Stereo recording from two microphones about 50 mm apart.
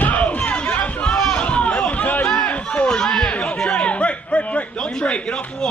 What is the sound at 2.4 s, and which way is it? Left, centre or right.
Chatter, left.